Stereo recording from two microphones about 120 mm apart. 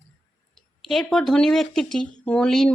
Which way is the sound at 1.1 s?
5° left (ahead or behind).